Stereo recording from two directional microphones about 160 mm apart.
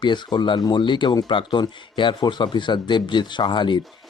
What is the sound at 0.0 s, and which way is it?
Speech, 30° left (ahead or behind).